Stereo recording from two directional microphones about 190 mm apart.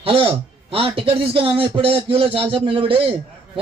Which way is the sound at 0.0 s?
30° right (ahead or behind).